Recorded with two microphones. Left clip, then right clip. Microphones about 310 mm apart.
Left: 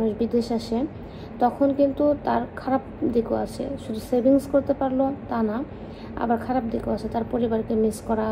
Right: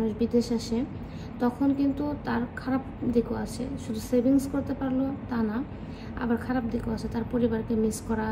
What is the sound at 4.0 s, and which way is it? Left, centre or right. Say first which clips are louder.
Speech: left 5 dB; left.